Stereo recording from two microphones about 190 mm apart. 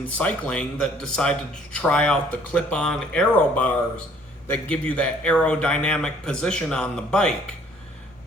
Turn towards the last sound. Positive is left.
turn(degrees=5)  # may be behind; listen again after turning